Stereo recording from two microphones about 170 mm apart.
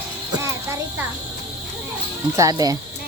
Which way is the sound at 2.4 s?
20° right (ahead or behind).